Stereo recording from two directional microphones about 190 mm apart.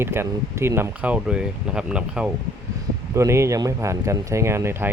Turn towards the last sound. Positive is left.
turn(degrees=-10)  # may be behind; listen again after turning